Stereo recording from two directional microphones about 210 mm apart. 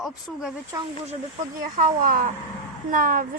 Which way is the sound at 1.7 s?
40° right (ahead or behind).